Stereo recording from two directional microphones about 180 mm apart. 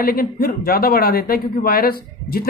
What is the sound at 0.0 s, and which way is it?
A man's voice, 55° left (ahead or behind).